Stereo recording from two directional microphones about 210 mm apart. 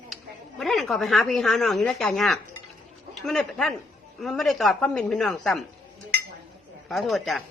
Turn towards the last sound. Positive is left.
turn(degrees=0)  # may be behind; listen again after turning